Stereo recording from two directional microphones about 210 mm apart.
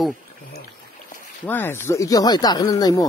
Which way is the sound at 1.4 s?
10° left (ahead or behind).